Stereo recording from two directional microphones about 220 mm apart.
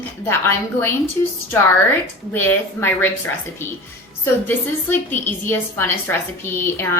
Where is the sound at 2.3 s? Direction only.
10° left (ahead or behind).